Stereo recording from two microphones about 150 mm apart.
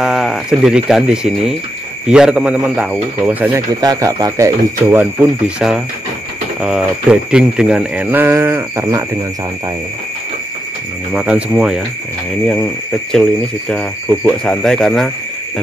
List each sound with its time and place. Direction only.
0.0 s speech: 5° right (ahead or behind)
3.8 s speech: 25° right (ahead or behind)
11.1 s speech: 5° right (ahead or behind)
13.7 s speech: 10° left (ahead or behind)